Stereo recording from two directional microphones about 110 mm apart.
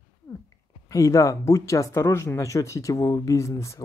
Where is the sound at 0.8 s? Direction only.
30° left (ahead or behind).